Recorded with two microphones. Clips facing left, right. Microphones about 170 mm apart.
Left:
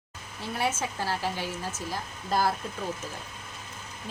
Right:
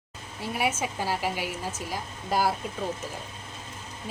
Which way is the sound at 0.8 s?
15° right (ahead or behind).